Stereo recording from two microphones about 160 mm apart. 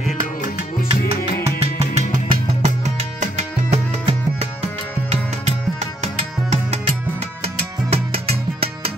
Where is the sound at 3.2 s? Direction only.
45° right (ahead or behind).